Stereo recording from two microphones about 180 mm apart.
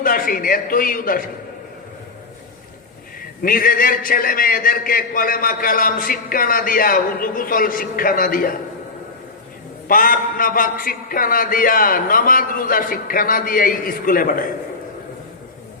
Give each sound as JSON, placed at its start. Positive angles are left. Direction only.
{"t": 0.0, "sound": "a man's voice", "side_deg": 55}
{"t": 3.4, "sound": "a man's voice", "side_deg": 50}
{"t": 9.9, "sound": "a man's voice", "side_deg": 50}